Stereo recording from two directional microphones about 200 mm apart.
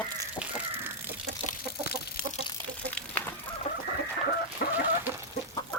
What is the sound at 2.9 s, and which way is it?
Chicken, 10° left (ahead or behind).